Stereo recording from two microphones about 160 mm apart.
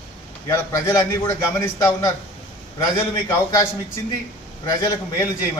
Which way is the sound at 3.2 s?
20° left (ahead or behind).